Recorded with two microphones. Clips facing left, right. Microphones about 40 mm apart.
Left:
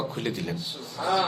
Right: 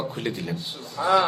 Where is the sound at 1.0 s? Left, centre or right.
Right.